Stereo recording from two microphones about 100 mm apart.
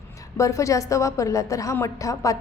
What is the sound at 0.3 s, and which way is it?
A woman's voice, 30° left (ahead or behind).